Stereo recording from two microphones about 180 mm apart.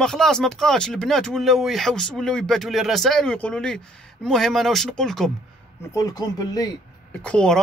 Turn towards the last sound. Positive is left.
turn(degrees=5)  # may be behind; listen again after turning